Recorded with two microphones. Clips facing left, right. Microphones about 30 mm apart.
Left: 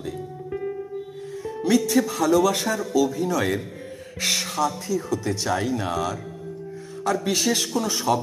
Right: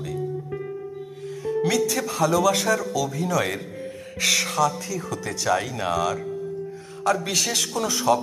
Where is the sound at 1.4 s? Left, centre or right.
Right.